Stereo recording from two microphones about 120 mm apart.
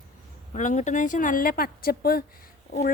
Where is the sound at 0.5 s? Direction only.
85° left.